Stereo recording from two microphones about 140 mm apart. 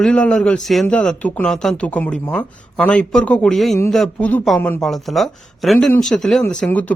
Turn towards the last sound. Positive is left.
turn(degrees=10)  # may be behind; listen again after turning